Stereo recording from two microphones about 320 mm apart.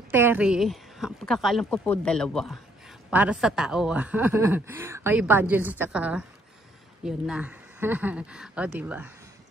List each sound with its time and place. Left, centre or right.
0.1 s speech: centre